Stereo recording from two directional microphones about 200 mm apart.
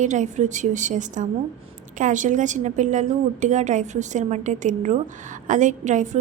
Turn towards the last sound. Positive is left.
turn(degrees=-35)  # may be behind; listen again after turning